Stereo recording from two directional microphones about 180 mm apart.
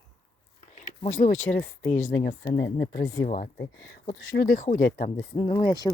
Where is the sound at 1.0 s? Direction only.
40° left (ahead or behind).